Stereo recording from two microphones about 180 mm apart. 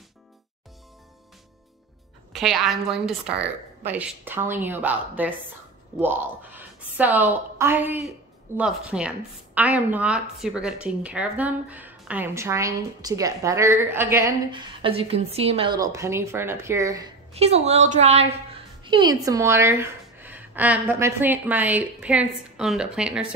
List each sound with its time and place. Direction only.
2.3 s a woman's voice: centre (ahead or behind)
14.5 s a woman's voice: 30° right (ahead or behind)
17.3 s a woman's voice: 35° right (ahead or behind)
18.9 s a woman's voice: 25° right (ahead or behind); by 23.2 s 5° right (ahead or behind)